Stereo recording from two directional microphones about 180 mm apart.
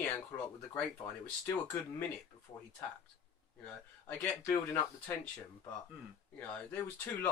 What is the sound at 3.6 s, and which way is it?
Speech, 5° left (ahead or behind).